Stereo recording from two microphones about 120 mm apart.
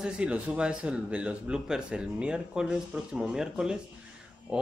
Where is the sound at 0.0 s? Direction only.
10° right (ahead or behind).